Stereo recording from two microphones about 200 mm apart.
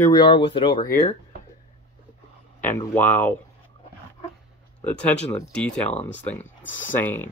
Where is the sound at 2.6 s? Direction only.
10° left (ahead or behind).